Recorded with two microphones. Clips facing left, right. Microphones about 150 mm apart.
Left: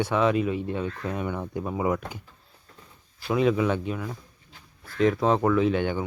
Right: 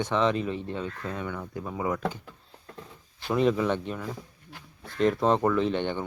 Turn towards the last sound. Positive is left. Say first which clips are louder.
# left 3 dB
turn(degrees=5)  # may be behind; listen again after turning